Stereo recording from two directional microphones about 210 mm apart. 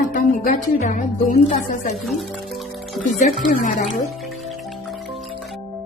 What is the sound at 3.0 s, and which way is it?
Speech, 40° left (ahead or behind).